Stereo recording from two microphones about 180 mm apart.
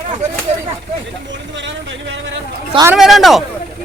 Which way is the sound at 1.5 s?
90° right.